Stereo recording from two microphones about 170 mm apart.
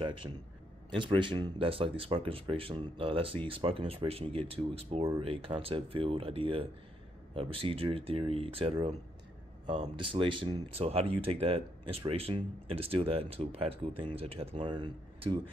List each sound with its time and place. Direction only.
0.0 s a man's voice: 30° right (ahead or behind)
9.9 s speech: 30° right (ahead or behind)